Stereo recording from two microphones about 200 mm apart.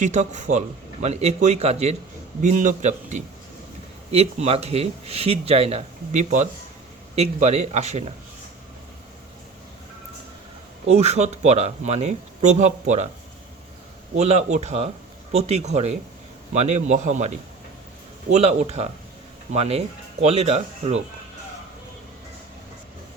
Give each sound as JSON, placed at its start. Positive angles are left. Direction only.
{"t": 0.0, "sound": "speech", "side_deg": -35}
{"t": 10.8, "sound": "speech", "side_deg": -35}
{"t": 14.2, "sound": "speech", "side_deg": -35}